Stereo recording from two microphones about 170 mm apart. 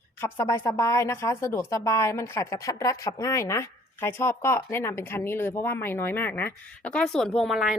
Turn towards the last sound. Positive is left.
turn(degrees=0)  # may be behind; listen again after turning